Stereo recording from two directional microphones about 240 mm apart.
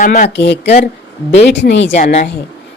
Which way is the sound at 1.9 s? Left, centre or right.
Left.